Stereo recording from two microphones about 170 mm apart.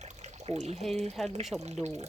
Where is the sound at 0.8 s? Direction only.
Centre (ahead or behind).